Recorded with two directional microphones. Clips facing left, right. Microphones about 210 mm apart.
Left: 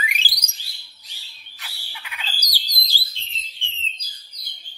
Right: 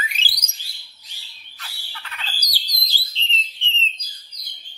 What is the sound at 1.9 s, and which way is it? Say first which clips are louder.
Squawk: even; 10° left (ahead or behind).